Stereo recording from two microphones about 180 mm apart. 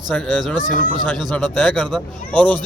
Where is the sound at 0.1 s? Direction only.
5° left (ahead or behind).